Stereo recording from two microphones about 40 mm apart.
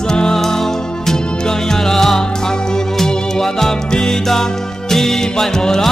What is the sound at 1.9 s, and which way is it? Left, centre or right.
Music, centre.